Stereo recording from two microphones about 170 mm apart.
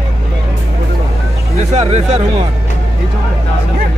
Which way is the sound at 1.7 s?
40° right (ahead or behind).